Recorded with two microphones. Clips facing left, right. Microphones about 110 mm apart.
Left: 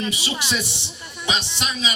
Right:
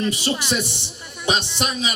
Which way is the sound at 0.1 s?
50° right (ahead or behind).